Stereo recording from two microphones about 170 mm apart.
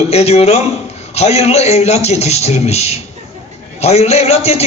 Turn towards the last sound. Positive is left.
turn(degrees=40)  # may be behind; listen again after turning